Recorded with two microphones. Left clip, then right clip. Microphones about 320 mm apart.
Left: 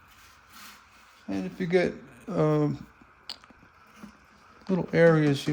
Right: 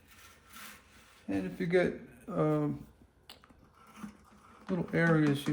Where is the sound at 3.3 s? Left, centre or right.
Left.